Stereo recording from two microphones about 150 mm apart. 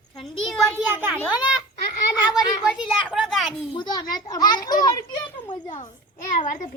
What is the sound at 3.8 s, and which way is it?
A child's voice, 25° left (ahead or behind).